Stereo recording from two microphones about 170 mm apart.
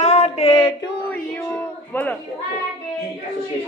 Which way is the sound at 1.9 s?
10° left (ahead or behind).